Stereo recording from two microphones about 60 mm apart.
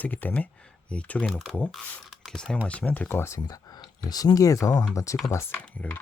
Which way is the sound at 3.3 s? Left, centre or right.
Left.